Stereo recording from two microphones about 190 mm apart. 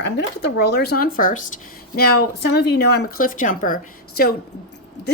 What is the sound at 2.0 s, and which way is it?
Speech, 60° left (ahead or behind).